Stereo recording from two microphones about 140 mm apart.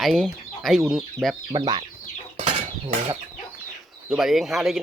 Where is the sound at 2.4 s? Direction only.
45° right (ahead or behind).